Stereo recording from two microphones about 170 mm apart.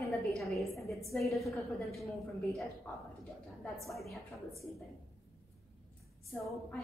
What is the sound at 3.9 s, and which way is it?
Speech, centre (ahead or behind).